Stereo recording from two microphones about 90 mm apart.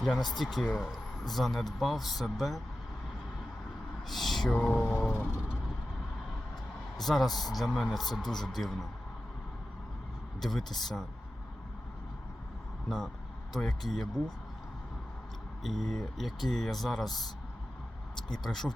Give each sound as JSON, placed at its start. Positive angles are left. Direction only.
{"t": 0.0, "sound": "speech", "side_deg": 5}
{"t": 4.1, "sound": "a sound", "side_deg": 0}
{"t": 4.5, "sound": "a sound", "side_deg": 15}
{"t": 6.9, "sound": "speech", "side_deg": 0}
{"t": 10.4, "sound": "speech", "side_deg": 5}
{"t": 13.6, "sound": "speech", "side_deg": 5}
{"t": 15.6, "sound": "speech", "side_deg": 0}
{"t": 18.3, "sound": "speech", "side_deg": 5}